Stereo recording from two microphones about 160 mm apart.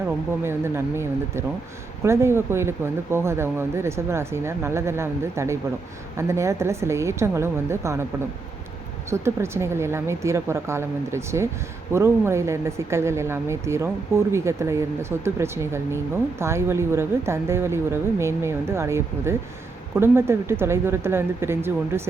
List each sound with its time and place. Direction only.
0.4 s speech: 15° right (ahead or behind)
9.0 s speech: 15° right (ahead or behind)